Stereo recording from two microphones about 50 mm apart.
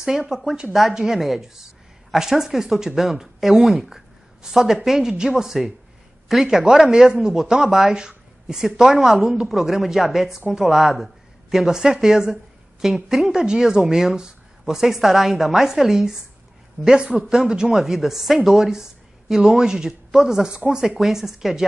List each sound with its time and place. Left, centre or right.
0.0 s a woman's voice: centre
16.8 s speech: centre
20.8 s a woman's voice: centre